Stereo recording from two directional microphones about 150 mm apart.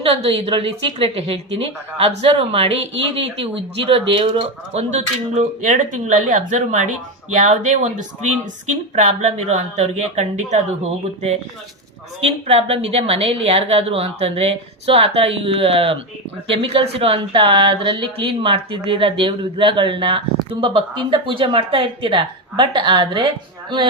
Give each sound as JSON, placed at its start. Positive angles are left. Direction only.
{"t": 0.0, "sound": "a woman's voice", "side_deg": -35}